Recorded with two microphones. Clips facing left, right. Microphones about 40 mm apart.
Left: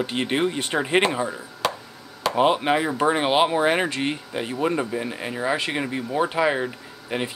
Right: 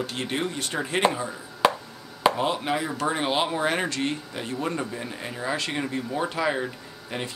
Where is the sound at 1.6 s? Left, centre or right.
Centre.